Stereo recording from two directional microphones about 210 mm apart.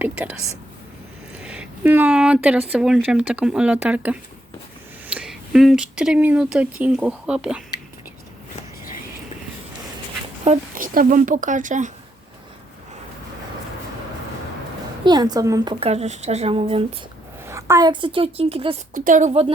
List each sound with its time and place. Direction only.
0.0 s speech: 5° right (ahead or behind)
1.4 s speech: 5° right (ahead or behind)
10.4 s speech: 35° right (ahead or behind)
15.0 s a woman's voice: 20° right (ahead or behind)
17.4 s a woman's voice: 15° right (ahead or behind)
18.9 s a woman's voice: 40° right (ahead or behind)